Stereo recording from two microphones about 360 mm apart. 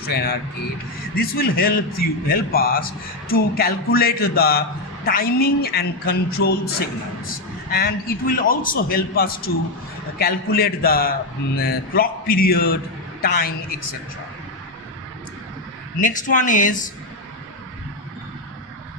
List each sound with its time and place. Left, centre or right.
0.0 s a man's voice: left
7.7 s a man's voice: left
16.0 s a man's voice: left